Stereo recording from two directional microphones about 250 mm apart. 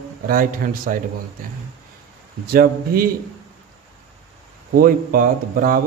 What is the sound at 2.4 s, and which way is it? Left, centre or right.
Speech, right.